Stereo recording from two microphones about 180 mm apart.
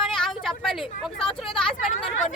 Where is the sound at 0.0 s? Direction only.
Centre (ahead or behind).